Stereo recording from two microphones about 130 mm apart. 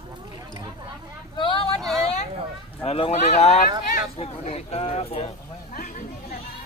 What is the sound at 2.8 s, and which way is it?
Speech, 50° left (ahead or behind).